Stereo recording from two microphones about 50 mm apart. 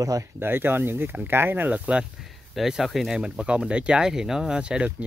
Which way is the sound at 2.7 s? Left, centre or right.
Centre.